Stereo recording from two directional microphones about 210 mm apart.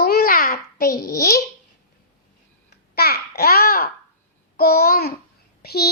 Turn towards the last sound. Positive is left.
turn(degrees=50)  # may be behind; listen again after turning